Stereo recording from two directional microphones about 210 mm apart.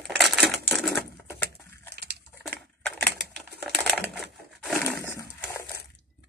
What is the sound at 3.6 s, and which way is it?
Typewriter, centre (ahead or behind).